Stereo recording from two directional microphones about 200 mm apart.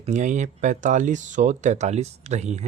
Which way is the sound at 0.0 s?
35° right (ahead or behind).